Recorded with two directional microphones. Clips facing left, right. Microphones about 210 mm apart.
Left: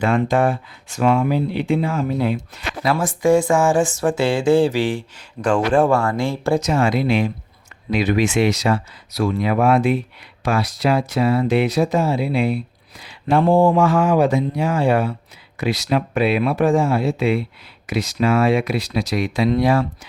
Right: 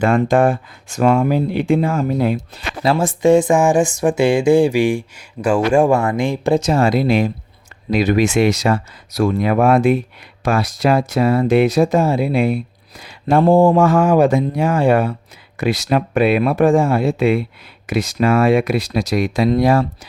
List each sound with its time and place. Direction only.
0.0 s speech: 50° right (ahead or behind)
2.8 s speech: 25° right (ahead or behind)
6.6 s speech: 35° right (ahead or behind)